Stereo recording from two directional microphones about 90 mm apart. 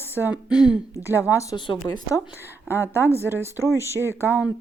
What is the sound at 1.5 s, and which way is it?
Speech, 55° left (ahead or behind).